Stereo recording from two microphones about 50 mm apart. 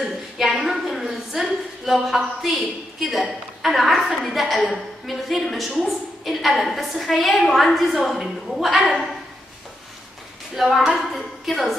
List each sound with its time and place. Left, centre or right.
0.4 s a woman's voice: centre
10.5 s a woman's voice: centre